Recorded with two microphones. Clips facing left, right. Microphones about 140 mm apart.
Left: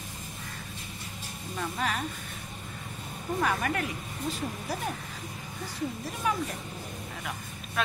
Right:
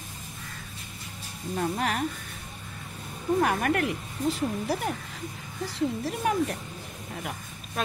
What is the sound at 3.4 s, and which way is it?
Speech, 60° right (ahead or behind).